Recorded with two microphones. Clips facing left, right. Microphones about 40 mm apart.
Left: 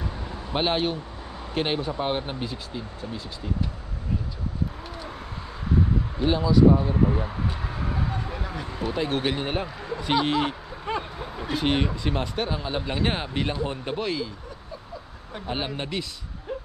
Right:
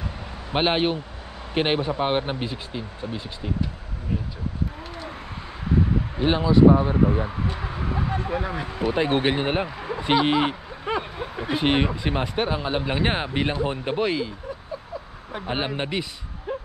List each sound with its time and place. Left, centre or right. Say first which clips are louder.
0.5 s speech: right 3 dB; right
6.1 s speech: right 2 dB; right
7.4 s speech: right 2 dB; centre
7.9 s a sound: right 7 dB; right
8.9 s speech: right 4 dB; right
15.3 s speech: right 3 dB; centre